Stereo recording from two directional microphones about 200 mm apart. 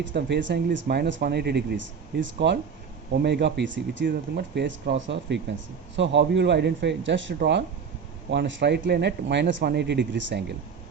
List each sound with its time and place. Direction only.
0.0 s speech: 65° right (ahead or behind)